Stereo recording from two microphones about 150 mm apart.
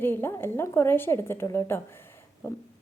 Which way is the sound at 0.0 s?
15° left (ahead or behind).